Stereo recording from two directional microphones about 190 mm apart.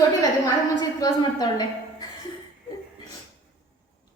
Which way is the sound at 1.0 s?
20° left (ahead or behind).